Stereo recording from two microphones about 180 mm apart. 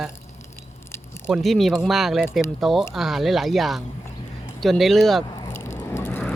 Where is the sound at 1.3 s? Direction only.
Centre (ahead or behind).